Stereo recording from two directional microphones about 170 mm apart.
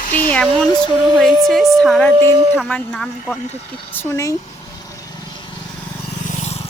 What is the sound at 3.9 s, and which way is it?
Speech, 15° left (ahead or behind).